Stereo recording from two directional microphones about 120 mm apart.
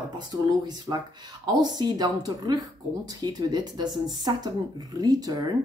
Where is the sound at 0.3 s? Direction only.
35° right (ahead or behind).